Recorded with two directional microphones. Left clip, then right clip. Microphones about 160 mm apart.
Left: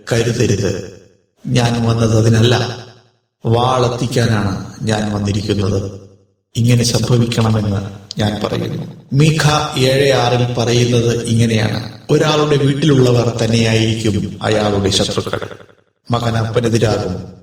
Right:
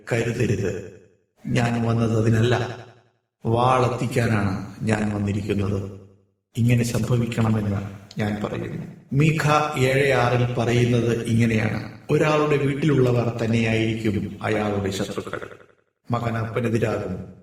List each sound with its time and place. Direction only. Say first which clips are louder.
0.0 s a man's voice: left 8 dB; 25° left (ahead or behind)